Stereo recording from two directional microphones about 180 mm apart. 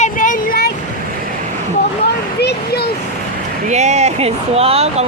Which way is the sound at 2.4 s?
65° left (ahead or behind).